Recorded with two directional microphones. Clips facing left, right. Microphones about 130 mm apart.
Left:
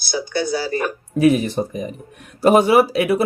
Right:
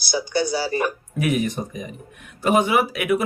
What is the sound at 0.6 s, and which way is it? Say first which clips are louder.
Speech: left 1 dB; 20° right (ahead or behind).